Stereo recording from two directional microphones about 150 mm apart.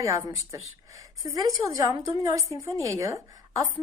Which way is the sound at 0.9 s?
20° right (ahead or behind).